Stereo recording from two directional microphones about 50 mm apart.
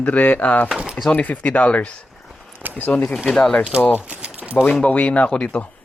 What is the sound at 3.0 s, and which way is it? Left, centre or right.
Speech, centre.